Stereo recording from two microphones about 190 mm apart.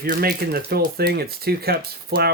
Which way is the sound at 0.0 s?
50° right (ahead or behind).